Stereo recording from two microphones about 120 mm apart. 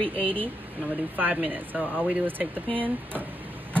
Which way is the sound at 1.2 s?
15° right (ahead or behind).